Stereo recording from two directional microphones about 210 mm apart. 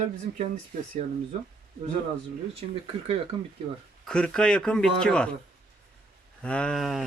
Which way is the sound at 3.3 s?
25° right (ahead or behind).